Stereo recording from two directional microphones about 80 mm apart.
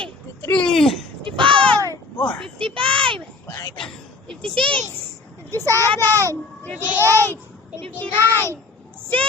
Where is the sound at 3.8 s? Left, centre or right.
Centre.